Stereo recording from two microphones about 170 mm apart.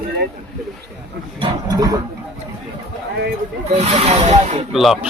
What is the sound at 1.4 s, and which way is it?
Speech, 20° right (ahead or behind).